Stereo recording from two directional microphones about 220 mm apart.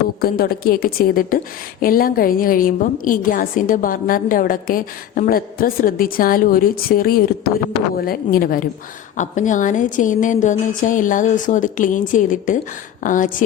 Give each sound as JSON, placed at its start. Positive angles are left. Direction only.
{"t": 0.2, "sound": "a woman's voice", "side_deg": 45}